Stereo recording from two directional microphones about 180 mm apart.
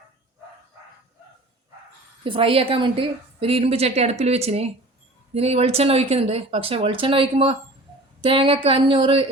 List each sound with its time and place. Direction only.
2.2 s a woman's voice: 30° right (ahead or behind)